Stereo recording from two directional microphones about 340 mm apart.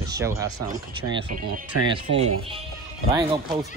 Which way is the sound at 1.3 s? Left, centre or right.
Right.